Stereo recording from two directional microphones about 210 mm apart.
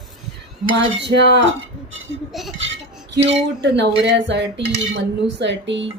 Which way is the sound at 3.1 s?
55° right (ahead or behind).